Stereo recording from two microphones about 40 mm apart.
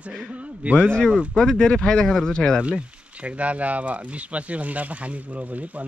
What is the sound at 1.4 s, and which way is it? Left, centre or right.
Speech, centre.